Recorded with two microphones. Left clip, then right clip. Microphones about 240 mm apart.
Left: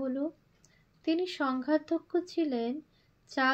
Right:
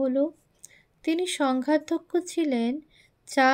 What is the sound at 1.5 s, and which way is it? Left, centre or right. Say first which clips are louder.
Speech: right 5 dB; centre.